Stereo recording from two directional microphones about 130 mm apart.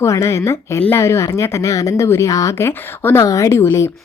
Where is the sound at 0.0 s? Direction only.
25° left (ahead or behind).